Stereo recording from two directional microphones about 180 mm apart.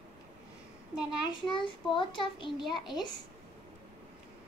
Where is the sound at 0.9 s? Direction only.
5° right (ahead or behind).